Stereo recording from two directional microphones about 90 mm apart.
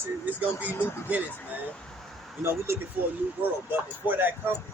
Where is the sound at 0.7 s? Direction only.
25° left (ahead or behind).